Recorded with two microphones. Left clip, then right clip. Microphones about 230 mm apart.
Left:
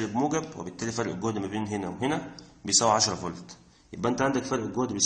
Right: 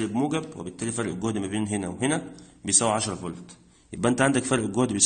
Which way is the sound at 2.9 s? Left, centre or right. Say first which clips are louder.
Left 3 dB; right.